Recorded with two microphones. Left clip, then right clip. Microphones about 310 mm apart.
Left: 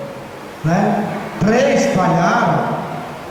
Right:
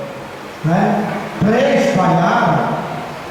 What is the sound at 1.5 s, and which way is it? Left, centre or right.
Speech, centre.